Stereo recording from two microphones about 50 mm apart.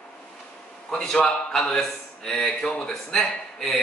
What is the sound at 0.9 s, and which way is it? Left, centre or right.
Speech, centre.